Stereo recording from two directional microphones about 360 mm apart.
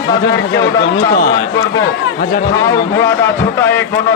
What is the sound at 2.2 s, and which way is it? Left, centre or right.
Speech, left.